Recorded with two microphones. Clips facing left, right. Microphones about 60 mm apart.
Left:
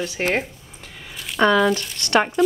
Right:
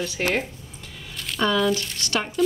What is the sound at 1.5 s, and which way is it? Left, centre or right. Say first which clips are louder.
Speech: left 3 dB; left.